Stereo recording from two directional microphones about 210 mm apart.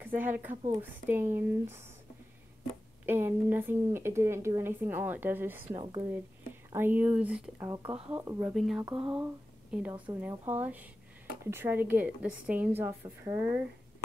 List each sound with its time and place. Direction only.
0.0 s speech: 10° right (ahead or behind)
3.1 s speech: 10° right (ahead or behind)
5.7 s speech: 20° right (ahead or behind)
6.7 s speech: 10° right (ahead or behind)
7.5 s speech: 15° right (ahead or behind)
8.1 s speech: 10° right (ahead or behind)
8.5 s speech: centre (ahead or behind)
8.8 s speech: 25° right (ahead or behind)
9.2 s speech: 5° right (ahead or behind)